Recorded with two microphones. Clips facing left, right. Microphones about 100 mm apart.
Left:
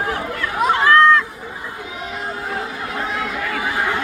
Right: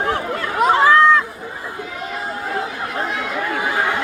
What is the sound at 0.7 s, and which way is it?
Chatter, 10° right (ahead or behind).